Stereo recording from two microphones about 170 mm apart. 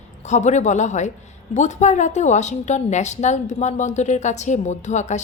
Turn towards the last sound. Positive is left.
turn(degrees=45)  # may be behind; listen again after turning